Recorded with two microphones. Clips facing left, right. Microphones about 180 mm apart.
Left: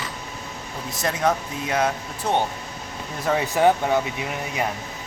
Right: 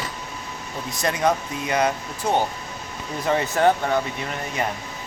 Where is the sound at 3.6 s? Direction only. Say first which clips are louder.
Left 2 dB; 10° left (ahead or behind).